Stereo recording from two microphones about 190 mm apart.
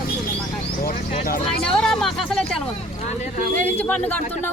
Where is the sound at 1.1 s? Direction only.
50° left (ahead or behind).